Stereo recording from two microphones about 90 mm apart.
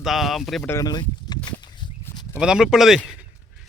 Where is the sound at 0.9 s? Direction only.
50° left (ahead or behind).